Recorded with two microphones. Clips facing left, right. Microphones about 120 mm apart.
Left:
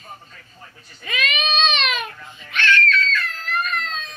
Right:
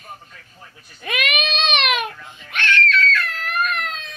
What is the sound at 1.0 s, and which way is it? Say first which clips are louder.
Baby cry: right 1 dB; 60° right (ahead or behind).